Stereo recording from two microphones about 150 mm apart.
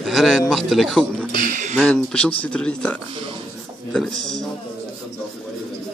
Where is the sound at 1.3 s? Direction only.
60° right (ahead or behind).